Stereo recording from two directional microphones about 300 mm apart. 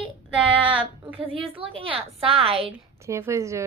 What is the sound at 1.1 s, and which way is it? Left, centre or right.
A woman's voice, centre.